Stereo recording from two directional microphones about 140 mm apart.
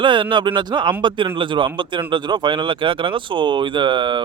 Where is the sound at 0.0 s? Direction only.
35° right (ahead or behind).